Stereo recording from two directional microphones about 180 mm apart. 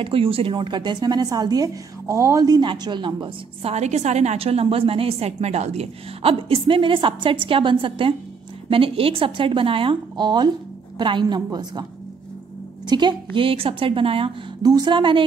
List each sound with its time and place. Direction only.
0.0 s speech: 30° right (ahead or behind)
12.8 s speech: 25° right (ahead or behind)